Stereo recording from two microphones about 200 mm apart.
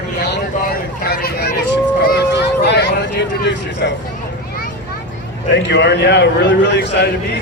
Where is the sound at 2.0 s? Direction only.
55° left (ahead or behind).